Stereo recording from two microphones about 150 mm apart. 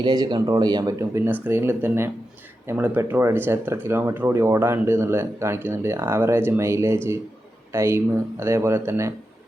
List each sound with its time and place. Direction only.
0.0 s speech: 30° right (ahead or behind)